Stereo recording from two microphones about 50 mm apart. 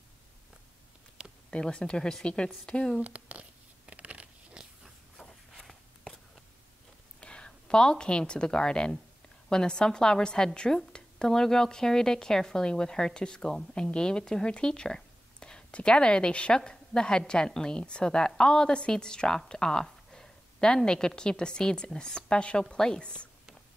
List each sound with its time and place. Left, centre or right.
1.5 s a woman's voice: centre
3.0 s speech: right
3.8 s crunch: right
5.1 s walk: centre
7.2 s a woman's voice: centre